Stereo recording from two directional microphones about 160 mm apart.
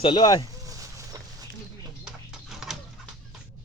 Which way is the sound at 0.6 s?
20° right (ahead or behind).